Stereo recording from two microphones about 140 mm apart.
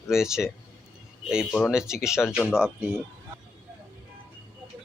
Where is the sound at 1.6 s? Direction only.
5° right (ahead or behind).